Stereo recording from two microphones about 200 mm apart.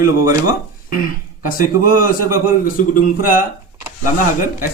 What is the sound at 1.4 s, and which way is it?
Speech, 45° left (ahead or behind).